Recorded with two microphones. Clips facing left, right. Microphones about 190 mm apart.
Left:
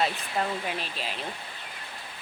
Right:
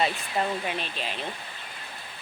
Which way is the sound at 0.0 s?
Centre (ahead or behind).